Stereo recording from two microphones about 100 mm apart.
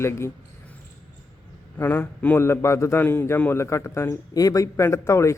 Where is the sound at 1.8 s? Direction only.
20° left (ahead or behind).